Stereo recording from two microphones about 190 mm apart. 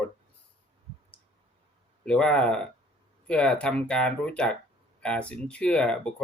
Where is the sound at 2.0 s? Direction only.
5° left (ahead or behind).